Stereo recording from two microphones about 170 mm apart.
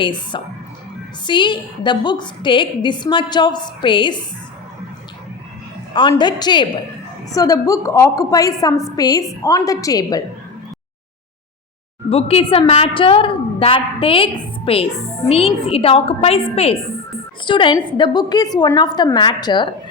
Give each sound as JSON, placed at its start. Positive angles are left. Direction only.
{"t": 0.0, "sound": "a woman's voice", "side_deg": 30}
{"t": 5.9, "sound": "a woman's voice", "side_deg": 25}
{"t": 12.0, "sound": "a woman's voice", "side_deg": 35}